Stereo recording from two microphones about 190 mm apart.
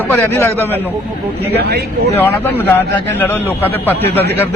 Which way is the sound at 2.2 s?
10° left (ahead or behind).